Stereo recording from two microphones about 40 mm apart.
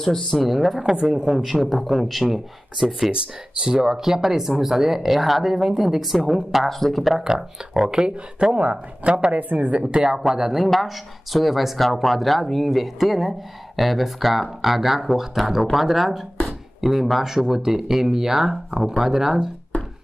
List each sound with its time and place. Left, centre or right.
0.4 s speech: centre
1.0 s speech: centre
1.3 s speech: centre
7.2 s speech: centre
8.5 s speech: right
10.1 s speech: centre
10.6 s speech: centre